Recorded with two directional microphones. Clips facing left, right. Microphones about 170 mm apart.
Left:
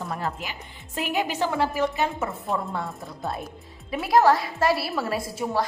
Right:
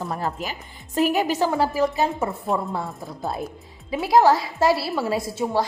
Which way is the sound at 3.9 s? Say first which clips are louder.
Right 2 dB; 25° right (ahead or behind).